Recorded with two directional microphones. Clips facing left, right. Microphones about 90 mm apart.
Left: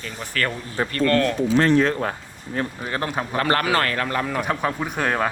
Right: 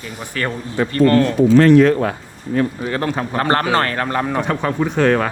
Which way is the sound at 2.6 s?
25° left (ahead or behind).